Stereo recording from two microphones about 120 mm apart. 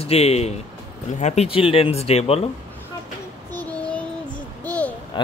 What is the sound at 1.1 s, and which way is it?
Speech, 75° left (ahead or behind).